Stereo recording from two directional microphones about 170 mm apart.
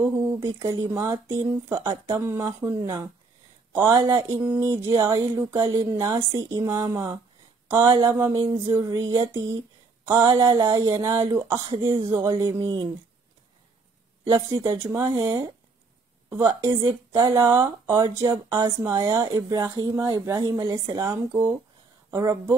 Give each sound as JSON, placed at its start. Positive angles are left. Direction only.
{"t": 0.0, "sound": "speech", "side_deg": -20}
{"t": 8.3, "sound": "speech", "side_deg": -25}
{"t": 14.5, "sound": "speech", "side_deg": -15}